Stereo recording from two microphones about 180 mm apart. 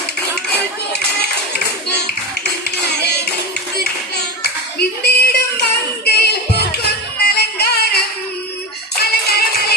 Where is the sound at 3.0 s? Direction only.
65° left (ahead or behind).